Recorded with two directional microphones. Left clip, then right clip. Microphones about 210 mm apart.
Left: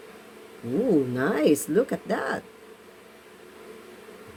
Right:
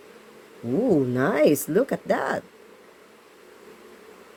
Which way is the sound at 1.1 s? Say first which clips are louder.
Right 3 dB; 35° right (ahead or behind).